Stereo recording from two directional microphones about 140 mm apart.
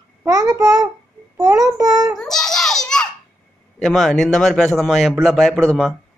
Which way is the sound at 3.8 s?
Centre (ahead or behind).